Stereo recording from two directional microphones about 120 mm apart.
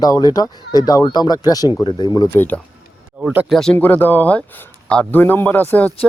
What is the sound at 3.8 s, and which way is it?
Speech, 15° left (ahead or behind).